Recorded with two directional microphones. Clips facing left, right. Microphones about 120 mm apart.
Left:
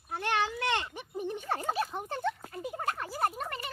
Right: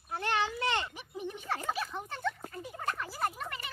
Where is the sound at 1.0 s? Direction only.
45° left (ahead or behind).